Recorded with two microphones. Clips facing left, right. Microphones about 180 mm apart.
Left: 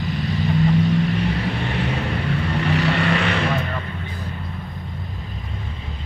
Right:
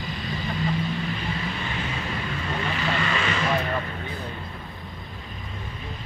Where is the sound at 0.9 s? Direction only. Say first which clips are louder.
Left 9 dB; 70° left (ahead or behind).